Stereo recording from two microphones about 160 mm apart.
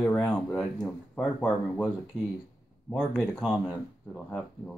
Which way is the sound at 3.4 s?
Centre (ahead or behind).